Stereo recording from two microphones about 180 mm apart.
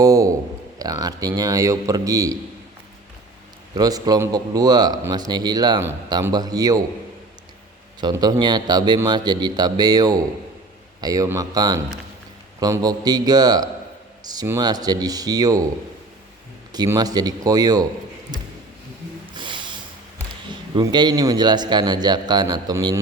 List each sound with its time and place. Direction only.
0.0 s a sound: 20° right (ahead or behind)
0.8 s a man's voice: 20° right (ahead or behind)
3.8 s a man's voice: 20° right (ahead or behind)
8.0 s a man's voice: 25° right (ahead or behind)
16.7 s a man's voice: 20° right (ahead or behind)
19.3 s snort: 25° right (ahead or behind)
20.5 s a man's voice: 25° right (ahead or behind)